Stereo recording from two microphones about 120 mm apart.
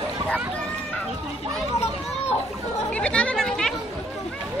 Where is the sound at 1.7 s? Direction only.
60° left (ahead or behind).